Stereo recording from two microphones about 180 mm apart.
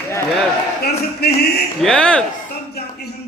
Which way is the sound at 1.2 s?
60° left (ahead or behind).